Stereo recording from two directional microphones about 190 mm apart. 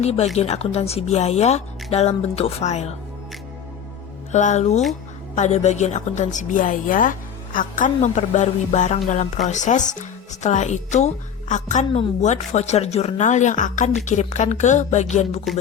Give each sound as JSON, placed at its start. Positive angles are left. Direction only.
{"t": 0.0, "sound": "a woman's voice", "side_deg": 35}
{"t": 4.3, "sound": "a woman's voice", "side_deg": 40}